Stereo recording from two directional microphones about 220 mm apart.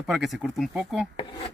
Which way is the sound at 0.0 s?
Centre (ahead or behind).